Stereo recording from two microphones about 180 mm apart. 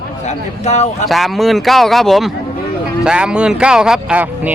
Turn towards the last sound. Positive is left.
turn(degrees=-5)  # may be behind; listen again after turning